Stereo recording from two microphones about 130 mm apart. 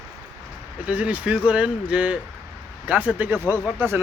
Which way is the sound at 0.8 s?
10° right (ahead or behind).